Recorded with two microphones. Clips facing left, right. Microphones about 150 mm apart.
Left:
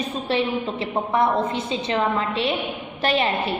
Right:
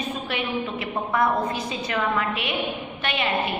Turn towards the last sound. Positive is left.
turn(degrees=35)  # may be behind; listen again after turning